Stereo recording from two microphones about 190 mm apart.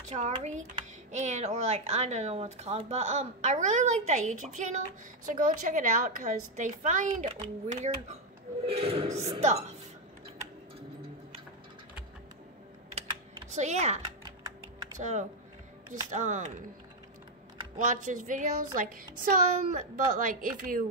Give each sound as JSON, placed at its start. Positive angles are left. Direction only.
{"t": 0.1, "sound": "a child's voice", "side_deg": -40}
{"t": 12.9, "sound": "typing", "side_deg": -35}
{"t": 15.0, "sound": "a child's voice", "side_deg": -40}
{"t": 17.7, "sound": "a child's voice", "side_deg": -40}